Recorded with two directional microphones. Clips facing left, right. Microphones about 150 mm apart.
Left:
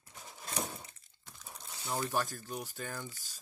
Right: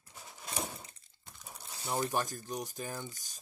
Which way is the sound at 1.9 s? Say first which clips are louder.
Right 1 dB; 15° right (ahead or behind).